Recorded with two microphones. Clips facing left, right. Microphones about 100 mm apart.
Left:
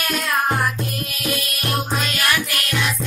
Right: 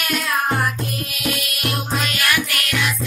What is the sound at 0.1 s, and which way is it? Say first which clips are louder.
Music: even; centre (ahead or behind).